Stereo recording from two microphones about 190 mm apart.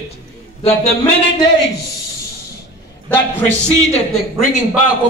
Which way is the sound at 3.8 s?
35° left (ahead or behind).